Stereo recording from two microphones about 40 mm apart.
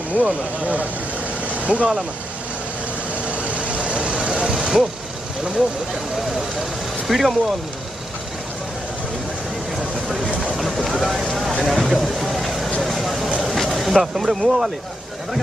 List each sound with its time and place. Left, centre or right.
0.2 s speech: right
3.3 s vehicle: right
4.3 s vehicle: centre
7.1 s speech: centre
10.0 s vehicle: centre
10.5 s speech: centre
11.3 s a sound: centre
12.8 s vehicle: centre